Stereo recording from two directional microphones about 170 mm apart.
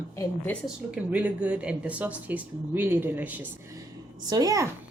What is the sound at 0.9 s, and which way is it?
Speech, 10° right (ahead or behind).